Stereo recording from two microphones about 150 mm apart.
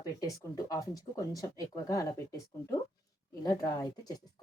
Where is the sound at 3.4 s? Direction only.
25° left (ahead or behind).